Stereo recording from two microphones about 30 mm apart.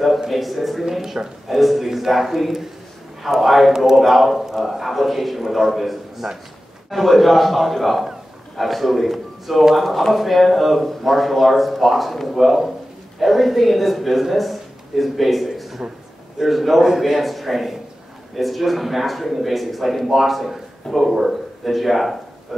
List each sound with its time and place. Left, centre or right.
0.3 s speech: centre
1.2 s speech: right
1.5 s a man's voice: centre
14.3 s a sound: centre
16.3 s speech: centre